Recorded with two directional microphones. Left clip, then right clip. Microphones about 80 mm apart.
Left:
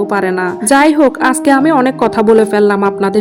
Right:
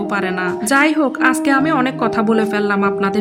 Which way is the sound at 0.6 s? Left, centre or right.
Left.